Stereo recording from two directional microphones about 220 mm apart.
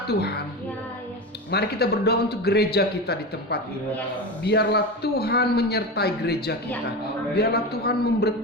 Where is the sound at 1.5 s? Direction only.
45° left (ahead or behind).